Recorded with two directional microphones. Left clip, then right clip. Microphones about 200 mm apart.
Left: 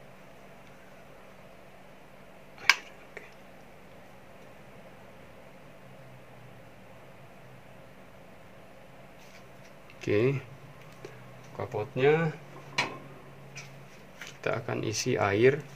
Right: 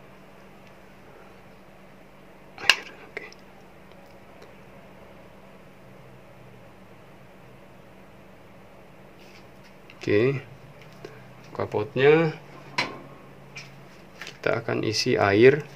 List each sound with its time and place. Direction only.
2.6 s a sound: 25° right (ahead or behind)
9.9 s speech: 5° right (ahead or behind)
11.5 s speech: 35° right (ahead or behind)
14.4 s speech: 20° right (ahead or behind)